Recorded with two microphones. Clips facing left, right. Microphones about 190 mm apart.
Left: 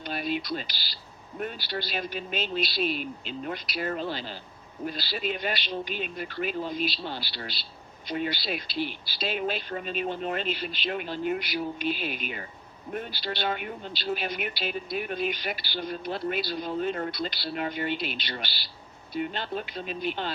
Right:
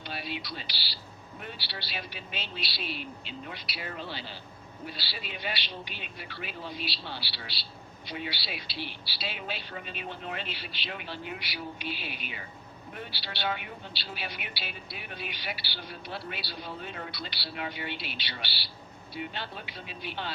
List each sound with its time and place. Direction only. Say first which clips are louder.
0.0 s a man's voice: left 7 dB; 50° left (ahead or behind)